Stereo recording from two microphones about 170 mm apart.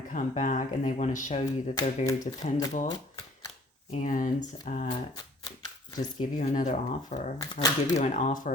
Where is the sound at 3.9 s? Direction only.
50° left (ahead or behind).